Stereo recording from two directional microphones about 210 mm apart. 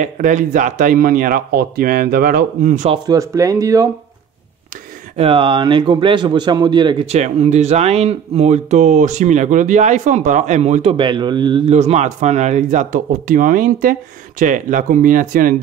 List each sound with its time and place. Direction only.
0.0 s a man's voice: 35° right (ahead or behind)
3.1 s speech: 15° right (ahead or behind)
5.1 s a man's voice: 25° right (ahead or behind)